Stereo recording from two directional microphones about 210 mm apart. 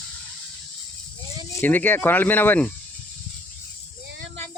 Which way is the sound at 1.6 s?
10° left (ahead or behind).